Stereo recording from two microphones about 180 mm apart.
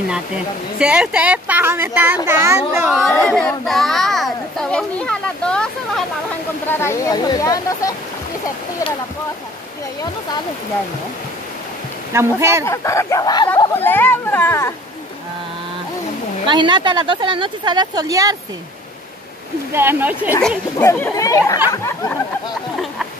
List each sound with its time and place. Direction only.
0.7 s a woman's voice: 5° right (ahead or behind)
2.9 s a child's voice: centre (ahead or behind); by 7.9 s 20° left (ahead or behind)
12.1 s a woman's voice: 15° right (ahead or behind)
12.6 s speech: 15° left (ahead or behind)
13.7 s speech: 10° left (ahead or behind)
16.4 s speech: 25° right (ahead or behind)
19.7 s a woman's voice: 10° right (ahead or behind)
20.7 s speech: 15° left (ahead or behind)